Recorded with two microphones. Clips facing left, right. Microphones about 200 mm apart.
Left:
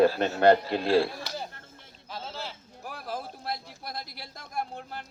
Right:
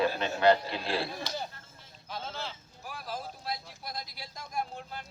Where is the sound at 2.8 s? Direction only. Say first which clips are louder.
Left 3 dB; 55° left (ahead or behind).